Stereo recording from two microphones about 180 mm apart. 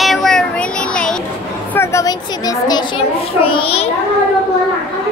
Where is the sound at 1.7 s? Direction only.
15° left (ahead or behind).